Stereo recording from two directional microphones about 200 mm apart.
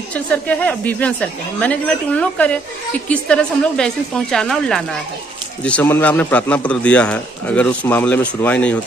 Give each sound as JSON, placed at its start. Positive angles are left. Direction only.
{"t": 0.1, "sound": "a man's voice", "side_deg": 5}